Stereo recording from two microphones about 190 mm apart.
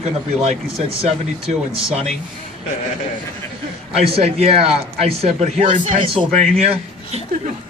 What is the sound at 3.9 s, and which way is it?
Speech, 30° right (ahead or behind).